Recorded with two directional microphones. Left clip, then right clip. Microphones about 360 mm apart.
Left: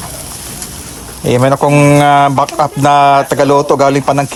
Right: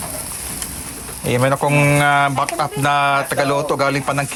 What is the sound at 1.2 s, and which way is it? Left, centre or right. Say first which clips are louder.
Speech: left 7 dB; centre.